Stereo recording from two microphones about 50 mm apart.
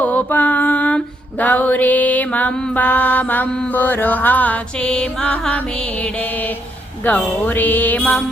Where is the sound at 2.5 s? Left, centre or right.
Centre.